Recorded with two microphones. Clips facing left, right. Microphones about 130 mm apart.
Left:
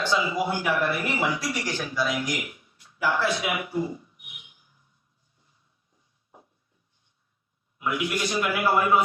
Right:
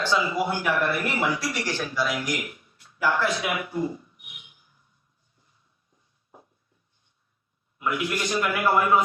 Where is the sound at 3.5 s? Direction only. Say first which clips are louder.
Even; 20° left (ahead or behind).